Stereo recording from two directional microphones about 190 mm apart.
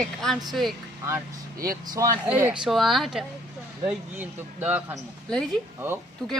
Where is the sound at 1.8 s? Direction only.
20° right (ahead or behind).